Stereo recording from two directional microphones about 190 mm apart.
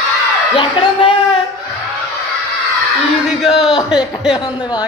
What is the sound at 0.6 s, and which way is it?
Speech, 25° left (ahead or behind).